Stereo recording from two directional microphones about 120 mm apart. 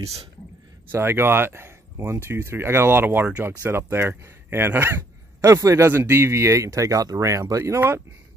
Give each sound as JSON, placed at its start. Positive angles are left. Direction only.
{"t": 0.9, "sound": "speech", "side_deg": -20}